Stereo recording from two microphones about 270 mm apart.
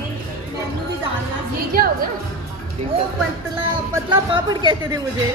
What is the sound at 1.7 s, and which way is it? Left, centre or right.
Speech, right.